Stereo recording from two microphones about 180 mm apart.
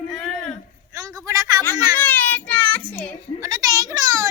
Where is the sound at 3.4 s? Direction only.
20° right (ahead or behind).